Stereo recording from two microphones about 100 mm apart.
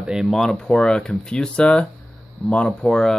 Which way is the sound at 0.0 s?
5° right (ahead or behind).